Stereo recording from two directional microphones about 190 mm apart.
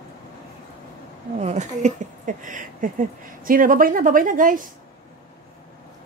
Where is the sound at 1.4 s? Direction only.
35° right (ahead or behind).